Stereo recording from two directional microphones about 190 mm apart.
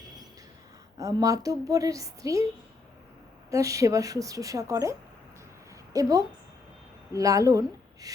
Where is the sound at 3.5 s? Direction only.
15° right (ahead or behind).